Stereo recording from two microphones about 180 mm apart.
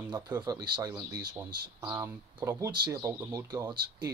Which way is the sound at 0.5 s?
20° right (ahead or behind).